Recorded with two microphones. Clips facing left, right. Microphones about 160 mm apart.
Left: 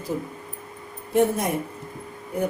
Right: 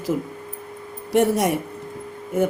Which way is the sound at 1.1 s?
80° right.